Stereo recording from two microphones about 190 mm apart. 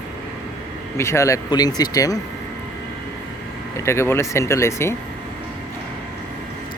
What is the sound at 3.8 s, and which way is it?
Speech, 15° left (ahead or behind).